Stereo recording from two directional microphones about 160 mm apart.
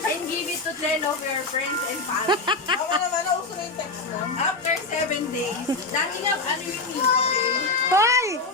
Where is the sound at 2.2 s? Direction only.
30° right (ahead or behind).